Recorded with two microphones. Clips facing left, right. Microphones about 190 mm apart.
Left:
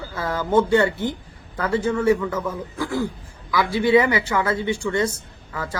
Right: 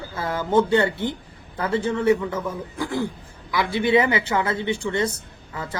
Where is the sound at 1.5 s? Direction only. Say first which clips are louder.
Left 1 dB; 25° right (ahead or behind).